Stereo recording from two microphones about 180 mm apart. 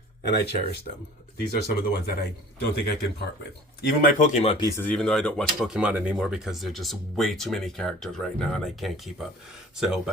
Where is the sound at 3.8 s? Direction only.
50° left (ahead or behind).